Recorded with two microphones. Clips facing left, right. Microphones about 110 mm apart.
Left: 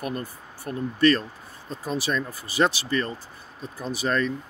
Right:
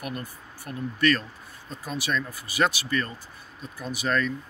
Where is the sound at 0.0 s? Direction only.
35° left (ahead or behind).